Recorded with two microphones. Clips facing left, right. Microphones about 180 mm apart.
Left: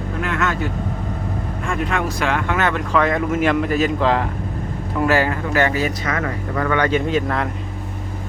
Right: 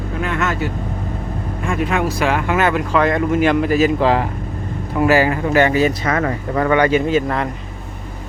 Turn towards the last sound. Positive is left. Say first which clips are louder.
# right 3 dB
turn(degrees=-5)  # may be behind; listen again after turning